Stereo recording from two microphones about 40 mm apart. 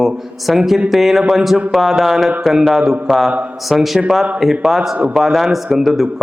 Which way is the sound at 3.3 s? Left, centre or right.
Right.